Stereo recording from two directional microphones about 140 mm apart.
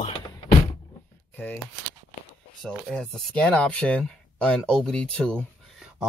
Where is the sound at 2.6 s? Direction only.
5° left (ahead or behind).